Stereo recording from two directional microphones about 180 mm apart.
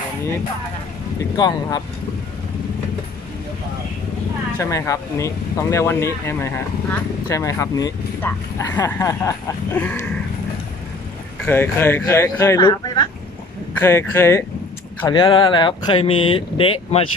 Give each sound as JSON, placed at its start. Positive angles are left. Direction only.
{"t": 1.3, "sound": "speech", "side_deg": 20}
{"t": 4.6, "sound": "speech", "side_deg": 15}
{"t": 11.4, "sound": "speech", "side_deg": 10}
{"t": 15.0, "sound": "speech", "side_deg": 25}